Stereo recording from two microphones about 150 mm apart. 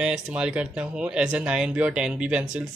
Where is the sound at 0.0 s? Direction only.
5° right (ahead or behind).